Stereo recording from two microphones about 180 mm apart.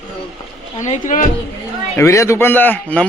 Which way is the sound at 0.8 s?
45° left (ahead or behind).